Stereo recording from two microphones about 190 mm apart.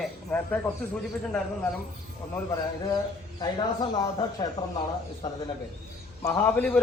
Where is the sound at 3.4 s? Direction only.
20° left (ahead or behind).